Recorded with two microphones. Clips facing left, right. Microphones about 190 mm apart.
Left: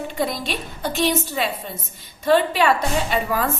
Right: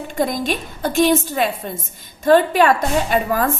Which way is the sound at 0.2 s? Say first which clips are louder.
Right 6 dB; 45° right (ahead or behind).